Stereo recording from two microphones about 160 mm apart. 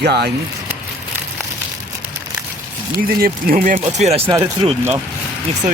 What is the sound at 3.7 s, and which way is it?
Speech, 40° right (ahead or behind).